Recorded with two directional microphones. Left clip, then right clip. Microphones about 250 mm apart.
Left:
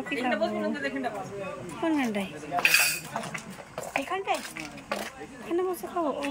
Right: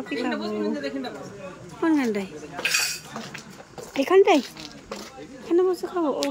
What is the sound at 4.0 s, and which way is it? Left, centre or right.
Speech, right.